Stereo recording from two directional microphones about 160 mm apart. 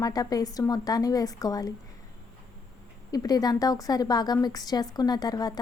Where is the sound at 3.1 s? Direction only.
25° left (ahead or behind).